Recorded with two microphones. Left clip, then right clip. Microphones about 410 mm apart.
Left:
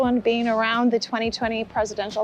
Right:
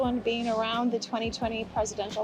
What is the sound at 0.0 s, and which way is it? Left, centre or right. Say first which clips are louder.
Speech: left 7 dB; left.